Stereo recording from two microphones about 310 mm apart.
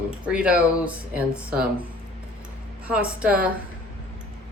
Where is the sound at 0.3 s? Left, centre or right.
Centre.